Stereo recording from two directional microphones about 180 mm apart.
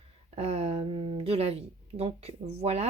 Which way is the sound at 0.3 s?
35° right (ahead or behind).